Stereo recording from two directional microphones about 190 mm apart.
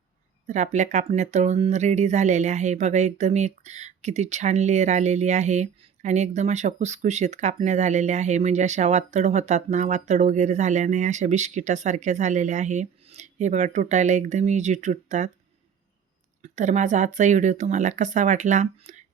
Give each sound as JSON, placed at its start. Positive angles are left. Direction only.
{"t": 0.4, "sound": "speech", "side_deg": -40}
{"t": 16.4, "sound": "speech", "side_deg": -40}